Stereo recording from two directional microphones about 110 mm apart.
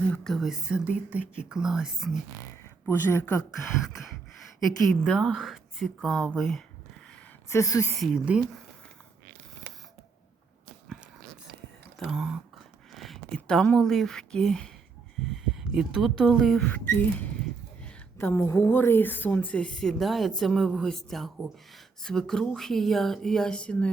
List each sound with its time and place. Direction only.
0.0 s speech: 10° left (ahead or behind)
3.1 s a woman's voice: 25° left (ahead or behind)
5.0 s speech: 5° left (ahead or behind)
7.5 s a woman's voice: 30° left (ahead or behind)
7.9 s speech: centre (ahead or behind)
8.2 s speech: 10° right (ahead or behind)
11.9 s whispering: centre (ahead or behind)
12.9 s speech: centre (ahead or behind)
16.6 s a woman's voice: 15° left (ahead or behind)